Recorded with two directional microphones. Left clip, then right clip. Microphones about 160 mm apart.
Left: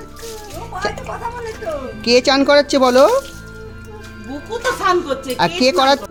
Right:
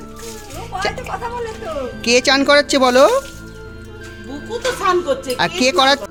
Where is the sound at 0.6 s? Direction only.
Centre (ahead or behind).